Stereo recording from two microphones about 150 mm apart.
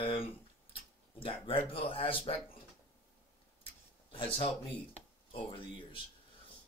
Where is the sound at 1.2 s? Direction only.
35° left (ahead or behind).